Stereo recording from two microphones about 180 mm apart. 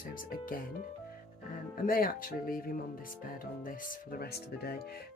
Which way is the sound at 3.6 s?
50° left (ahead or behind).